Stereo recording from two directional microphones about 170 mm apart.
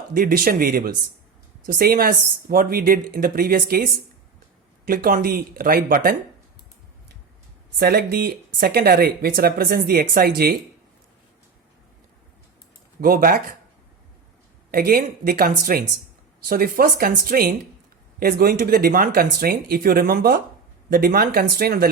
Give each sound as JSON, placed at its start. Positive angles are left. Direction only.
{"t": 0.1, "sound": "speech", "side_deg": -55}
{"t": 4.9, "sound": "speech", "side_deg": -60}
{"t": 7.8, "sound": "speech", "side_deg": -65}
{"t": 13.0, "sound": "speech", "side_deg": -55}
{"t": 14.7, "sound": "speech", "side_deg": -60}